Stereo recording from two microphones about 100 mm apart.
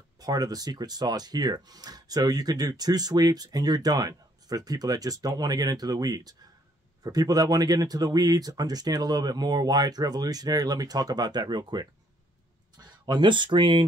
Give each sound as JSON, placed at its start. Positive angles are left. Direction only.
{"t": 0.2, "sound": "speech", "side_deg": -40}